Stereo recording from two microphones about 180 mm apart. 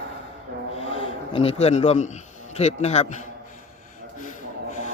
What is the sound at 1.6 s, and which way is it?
Speech, 35° left (ahead or behind).